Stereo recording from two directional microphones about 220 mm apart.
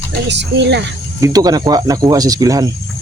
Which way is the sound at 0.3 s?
50° right (ahead or behind).